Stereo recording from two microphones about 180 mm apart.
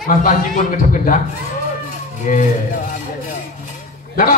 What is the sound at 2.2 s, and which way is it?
Speech, 45° left (ahead or behind).